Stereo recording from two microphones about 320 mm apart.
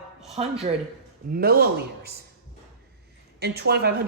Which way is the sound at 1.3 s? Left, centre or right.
Right.